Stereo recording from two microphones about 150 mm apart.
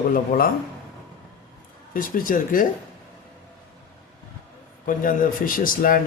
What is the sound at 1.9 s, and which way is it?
Speech, 65° left (ahead or behind).